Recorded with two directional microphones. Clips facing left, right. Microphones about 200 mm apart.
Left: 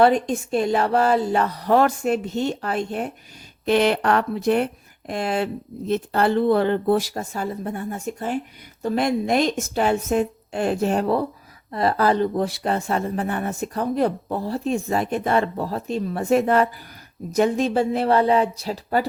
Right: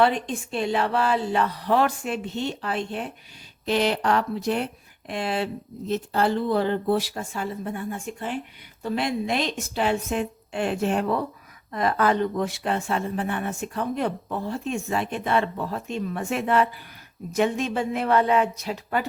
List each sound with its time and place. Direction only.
0.0 s speech: 45° left (ahead or behind)
3.7 s speech: 60° left (ahead or behind)
5.9 s speech: 60° left (ahead or behind); by 19.0 s 35° left (ahead or behind)